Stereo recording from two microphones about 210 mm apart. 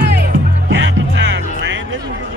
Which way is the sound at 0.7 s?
60° right (ahead or behind).